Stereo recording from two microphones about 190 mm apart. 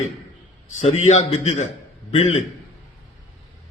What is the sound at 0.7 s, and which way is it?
A man's voice, 40° left (ahead or behind).